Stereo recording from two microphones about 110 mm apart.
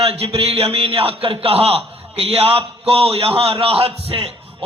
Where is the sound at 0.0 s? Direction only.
60° right (ahead or behind).